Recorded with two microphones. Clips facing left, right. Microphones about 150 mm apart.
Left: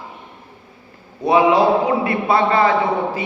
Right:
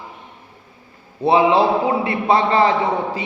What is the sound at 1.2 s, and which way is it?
A man's voice, 30° right (ahead or behind).